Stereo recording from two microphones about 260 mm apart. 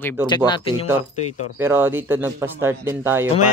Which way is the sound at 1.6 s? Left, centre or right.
Centre.